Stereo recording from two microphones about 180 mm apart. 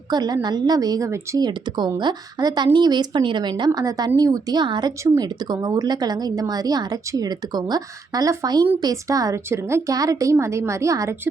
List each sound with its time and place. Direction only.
0.1 s a woman's voice: 20° right (ahead or behind)